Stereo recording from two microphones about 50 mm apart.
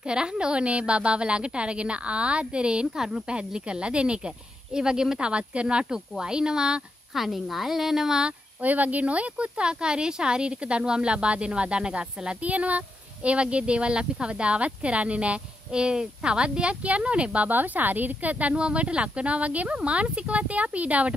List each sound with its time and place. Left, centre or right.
0.0 s speech: centre
7.2 s a woman's voice: centre
8.3 s speech: right
17.5 s speech: right